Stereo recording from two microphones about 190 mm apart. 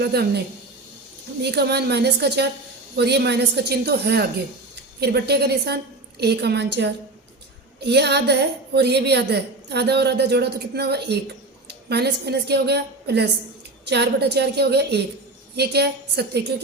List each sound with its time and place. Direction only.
0.0 s a woman's voice: 60° right (ahead or behind)